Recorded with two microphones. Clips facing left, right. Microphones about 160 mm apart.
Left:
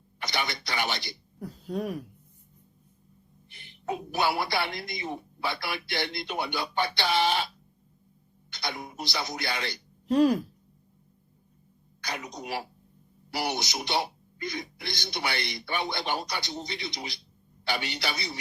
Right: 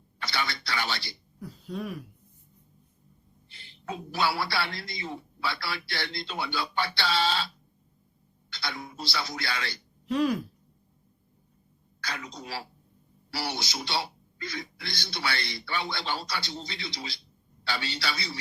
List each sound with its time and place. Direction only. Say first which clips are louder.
0.2 s speech: left 1 dB; 20° left (ahead or behind)
1.4 s speech: left 3 dB; 45° left (ahead or behind)
3.5 s a man's voice: left 4 dB; 20° left (ahead or behind)
10.1 s speech: left 4 dB; 40° left (ahead or behind)
11.9 s a man's voice: left 2 dB; 20° left (ahead or behind)